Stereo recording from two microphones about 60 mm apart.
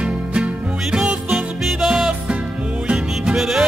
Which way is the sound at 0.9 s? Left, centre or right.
Centre.